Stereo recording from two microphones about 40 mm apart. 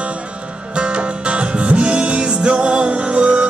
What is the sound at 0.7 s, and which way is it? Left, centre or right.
Music, right.